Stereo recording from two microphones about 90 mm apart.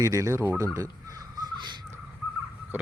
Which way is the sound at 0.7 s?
40° right (ahead or behind).